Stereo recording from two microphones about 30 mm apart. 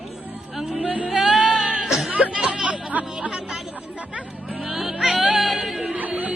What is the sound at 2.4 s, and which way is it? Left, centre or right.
Music, right.